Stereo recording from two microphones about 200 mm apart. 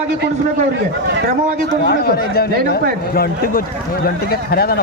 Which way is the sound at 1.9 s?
50° left (ahead or behind).